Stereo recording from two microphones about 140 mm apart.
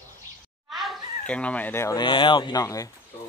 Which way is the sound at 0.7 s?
5° left (ahead or behind).